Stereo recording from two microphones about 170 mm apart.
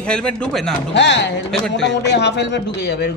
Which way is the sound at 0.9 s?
90° left.